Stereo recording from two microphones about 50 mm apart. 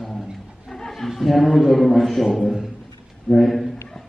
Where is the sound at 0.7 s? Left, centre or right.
Centre.